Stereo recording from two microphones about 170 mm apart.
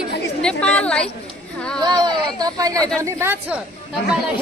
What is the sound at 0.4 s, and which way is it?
Speech, 5° left (ahead or behind).